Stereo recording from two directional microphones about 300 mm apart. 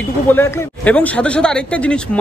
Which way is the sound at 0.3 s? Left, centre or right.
Centre.